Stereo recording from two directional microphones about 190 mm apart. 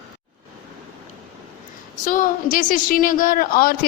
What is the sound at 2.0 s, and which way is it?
A woman's voice, 45° left (ahead or behind).